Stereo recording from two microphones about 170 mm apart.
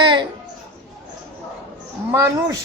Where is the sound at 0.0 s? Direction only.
30° right (ahead or behind).